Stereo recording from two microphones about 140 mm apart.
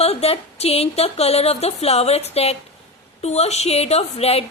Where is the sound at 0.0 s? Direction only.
45° left (ahead or behind).